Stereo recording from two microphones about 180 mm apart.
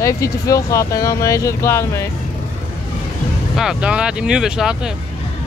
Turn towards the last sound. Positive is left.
turn(degrees=-5)  # may be behind; listen again after turning